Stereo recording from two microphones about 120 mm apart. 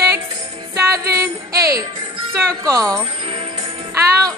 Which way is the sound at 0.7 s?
25° right (ahead or behind).